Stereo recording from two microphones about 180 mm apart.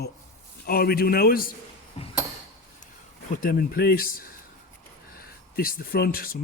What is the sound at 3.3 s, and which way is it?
Speech, 55° left (ahead or behind).